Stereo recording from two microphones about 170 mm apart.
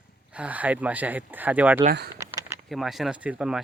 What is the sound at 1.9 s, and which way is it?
Speech, 75° right (ahead or behind).